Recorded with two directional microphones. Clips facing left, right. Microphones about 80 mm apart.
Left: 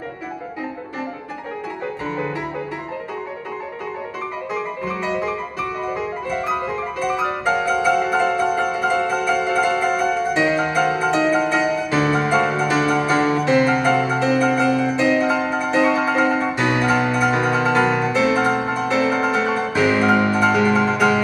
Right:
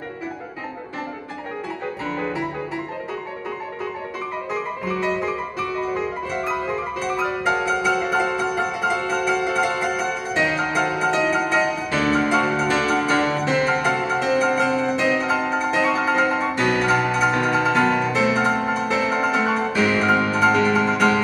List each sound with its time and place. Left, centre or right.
4.5 s music: centre
19.7 s music: centre